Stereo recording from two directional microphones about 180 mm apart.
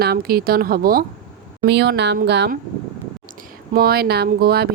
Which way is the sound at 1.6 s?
65° right (ahead or behind).